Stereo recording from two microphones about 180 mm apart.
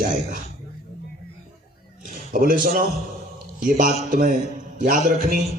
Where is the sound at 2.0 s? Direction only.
50° right (ahead or behind).